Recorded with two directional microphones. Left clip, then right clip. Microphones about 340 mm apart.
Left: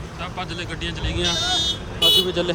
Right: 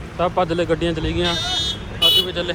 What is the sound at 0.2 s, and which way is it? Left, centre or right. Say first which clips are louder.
Speech: right 11 dB; centre.